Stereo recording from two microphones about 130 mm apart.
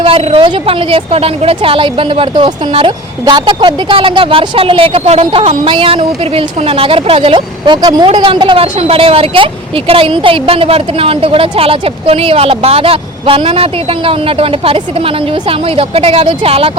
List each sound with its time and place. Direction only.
0.0 s a woman's voice: 45° right (ahead or behind)